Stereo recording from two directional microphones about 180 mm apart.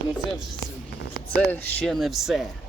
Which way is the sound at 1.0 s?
65° left (ahead or behind).